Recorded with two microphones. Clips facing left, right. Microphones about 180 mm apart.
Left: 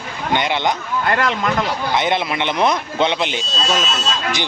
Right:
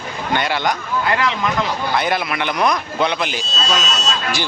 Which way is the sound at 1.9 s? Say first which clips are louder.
Left 2 dB; 20° left (ahead or behind).